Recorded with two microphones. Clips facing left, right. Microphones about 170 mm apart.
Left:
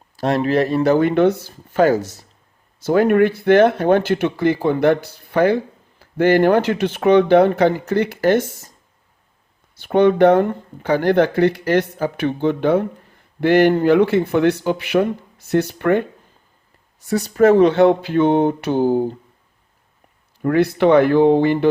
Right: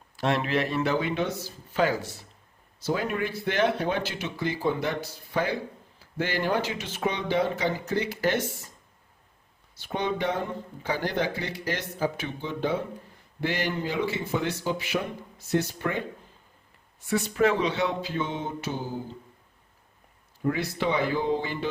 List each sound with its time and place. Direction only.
0.2 s speech: 40° left (ahead or behind)
2.8 s speech: 60° left (ahead or behind)
9.7 s speech: 60° left (ahead or behind)
17.0 s speech: 40° left (ahead or behind); by 19.1 s 60° left (ahead or behind)
20.4 s speech: 65° left (ahead or behind)